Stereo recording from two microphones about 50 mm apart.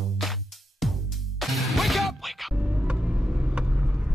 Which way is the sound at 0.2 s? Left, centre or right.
Centre.